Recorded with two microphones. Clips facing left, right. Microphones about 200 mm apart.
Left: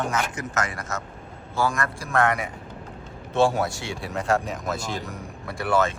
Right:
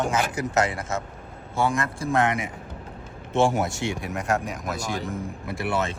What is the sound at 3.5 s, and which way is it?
Speech, 20° right (ahead or behind).